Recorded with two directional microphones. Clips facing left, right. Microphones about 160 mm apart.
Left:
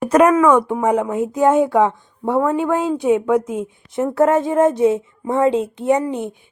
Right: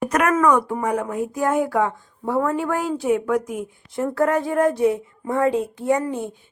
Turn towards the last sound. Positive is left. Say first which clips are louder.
# left 3 dB
turn(degrees=20)  # may be behind; listen again after turning